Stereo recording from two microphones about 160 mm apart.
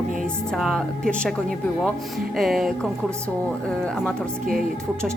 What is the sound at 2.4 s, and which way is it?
Speech, centre (ahead or behind).